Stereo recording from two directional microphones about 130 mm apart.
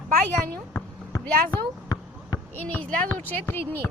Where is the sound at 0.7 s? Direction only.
20° left (ahead or behind).